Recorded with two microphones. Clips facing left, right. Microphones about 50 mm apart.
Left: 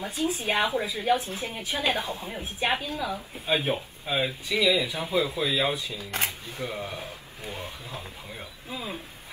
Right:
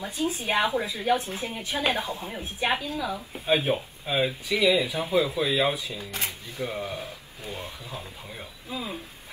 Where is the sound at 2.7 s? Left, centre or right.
Left.